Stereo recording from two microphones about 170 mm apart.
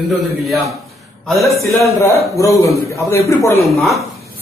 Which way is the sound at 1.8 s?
15° left (ahead or behind).